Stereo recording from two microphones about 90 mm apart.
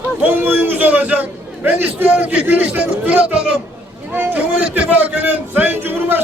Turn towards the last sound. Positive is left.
turn(degrees=-25)  # may be behind; listen again after turning